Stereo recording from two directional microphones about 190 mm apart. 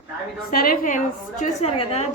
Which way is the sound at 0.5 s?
50° left (ahead or behind).